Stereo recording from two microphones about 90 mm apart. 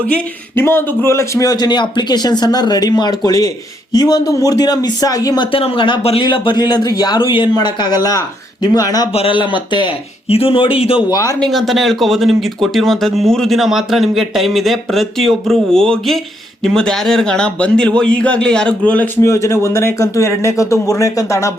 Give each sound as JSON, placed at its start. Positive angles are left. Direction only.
{"t": 0.5, "sound": "a man's voice", "side_deg": 25}
{"t": 5.5, "sound": "speech", "side_deg": 85}
{"t": 6.2, "sound": "speech", "side_deg": 60}
{"t": 7.3, "sound": "speech", "side_deg": 80}
{"t": 7.5, "sound": "a man's voice", "side_deg": 50}
{"t": 9.1, "sound": "speech", "side_deg": 80}
{"t": 11.1, "sound": "speech", "side_deg": 40}
{"t": 11.3, "sound": "a man's voice", "side_deg": 5}
{"t": 19.1, "sound": "speech", "side_deg": 30}